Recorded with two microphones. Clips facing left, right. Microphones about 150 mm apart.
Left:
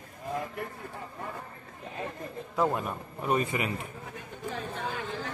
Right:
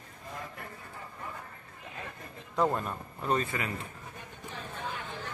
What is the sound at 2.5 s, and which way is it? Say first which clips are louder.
Speech: even; 5° left (ahead or behind).